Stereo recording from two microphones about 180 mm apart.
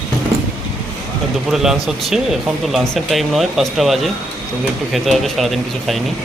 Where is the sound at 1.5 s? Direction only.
5° right (ahead or behind).